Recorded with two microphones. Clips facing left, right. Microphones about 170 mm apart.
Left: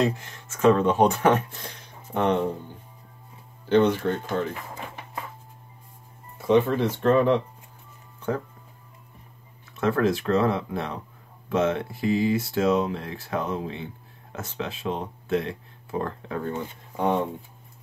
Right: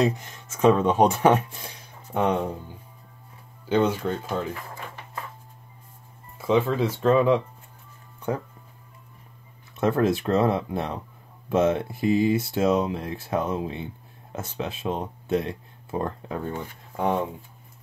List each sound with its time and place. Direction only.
0.0 s speech: 15° right (ahead or behind)
3.6 s speech: 10° right (ahead or behind)
6.3 s speech: 10° right (ahead or behind)
9.8 s speech: 20° right (ahead or behind)
16.9 s speech: 5° right (ahead or behind)